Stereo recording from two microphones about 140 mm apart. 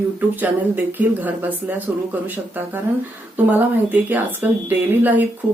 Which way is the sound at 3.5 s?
10° right (ahead or behind).